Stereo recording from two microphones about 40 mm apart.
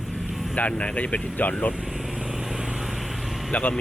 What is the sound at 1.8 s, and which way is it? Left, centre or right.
Vehicle, centre.